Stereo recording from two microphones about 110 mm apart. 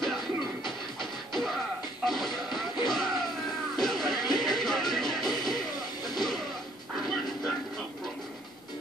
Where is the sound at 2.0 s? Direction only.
Centre (ahead or behind).